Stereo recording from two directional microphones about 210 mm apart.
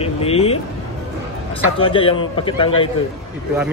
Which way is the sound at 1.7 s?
25° left (ahead or behind).